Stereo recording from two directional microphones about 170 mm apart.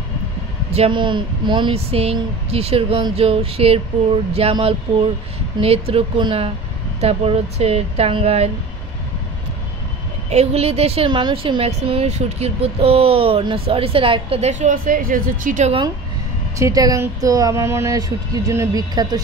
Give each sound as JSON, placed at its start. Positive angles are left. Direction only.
{"t": 0.7, "sound": "a woman's voice", "side_deg": -30}
{"t": 10.3, "sound": "a woman's voice", "side_deg": -40}
{"t": 16.5, "sound": "speech", "side_deg": -20}